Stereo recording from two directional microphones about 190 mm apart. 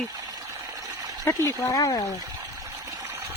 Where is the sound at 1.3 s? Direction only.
10° left (ahead or behind).